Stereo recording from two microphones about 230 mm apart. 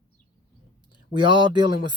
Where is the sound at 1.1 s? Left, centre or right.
Right.